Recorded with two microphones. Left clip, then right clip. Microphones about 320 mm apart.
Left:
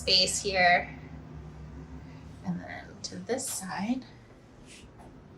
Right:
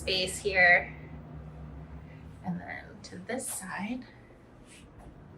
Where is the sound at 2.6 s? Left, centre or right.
Centre.